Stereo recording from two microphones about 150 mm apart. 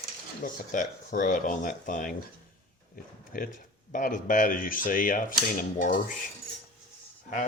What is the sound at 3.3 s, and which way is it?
Speech, 65° left (ahead or behind).